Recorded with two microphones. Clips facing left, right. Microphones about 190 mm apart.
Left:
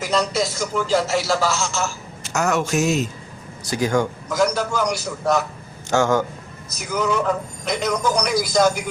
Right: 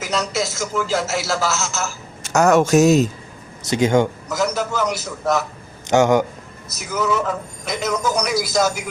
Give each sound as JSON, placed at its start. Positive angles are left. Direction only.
{"t": 0.0, "sound": "a man's voice", "side_deg": 0}
{"t": 2.2, "sound": "a man's voice", "side_deg": -45}
{"t": 3.6, "sound": "speech", "side_deg": -20}
{"t": 4.3, "sound": "a man's voice", "side_deg": 0}
{"t": 5.9, "sound": "a man's voice", "side_deg": -20}
{"t": 6.7, "sound": "a man's voice", "side_deg": -5}